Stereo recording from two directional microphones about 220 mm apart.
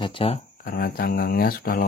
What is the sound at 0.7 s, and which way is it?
Speech, 45° left (ahead or behind).